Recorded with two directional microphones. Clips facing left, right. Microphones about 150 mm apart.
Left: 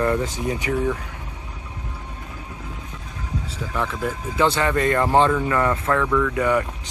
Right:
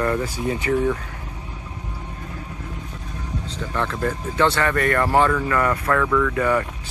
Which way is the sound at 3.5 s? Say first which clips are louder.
Right 1 dB; 5° left (ahead or behind).